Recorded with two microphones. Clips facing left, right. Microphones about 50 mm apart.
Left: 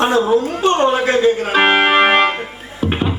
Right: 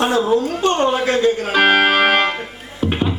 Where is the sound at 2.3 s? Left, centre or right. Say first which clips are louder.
Left 2 dB; centre.